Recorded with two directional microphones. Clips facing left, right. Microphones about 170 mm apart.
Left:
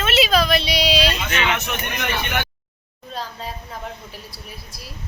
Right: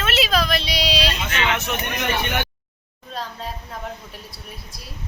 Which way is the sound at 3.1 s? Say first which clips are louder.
Even; centre (ahead or behind).